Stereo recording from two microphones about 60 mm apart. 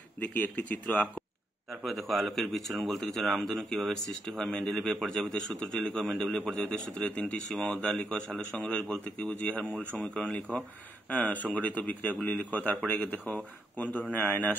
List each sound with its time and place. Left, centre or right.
0.2 s speech: left
1.8 s a man's voice: centre; by 14.6 s left